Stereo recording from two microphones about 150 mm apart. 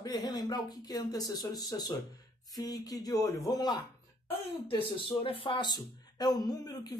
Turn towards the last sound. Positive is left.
turn(degrees=25)  # may be behind; listen again after turning